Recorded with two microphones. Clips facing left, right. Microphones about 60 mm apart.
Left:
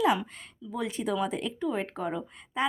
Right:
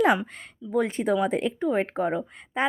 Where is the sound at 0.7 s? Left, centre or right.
Right.